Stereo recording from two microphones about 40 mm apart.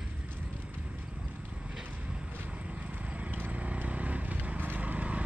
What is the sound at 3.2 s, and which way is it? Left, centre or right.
Clip-clop, right.